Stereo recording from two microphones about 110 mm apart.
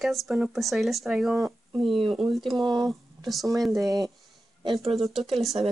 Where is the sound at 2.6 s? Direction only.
40° right (ahead or behind).